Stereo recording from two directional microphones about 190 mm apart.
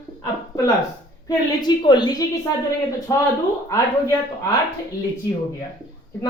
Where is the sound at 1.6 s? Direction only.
25° left (ahead or behind).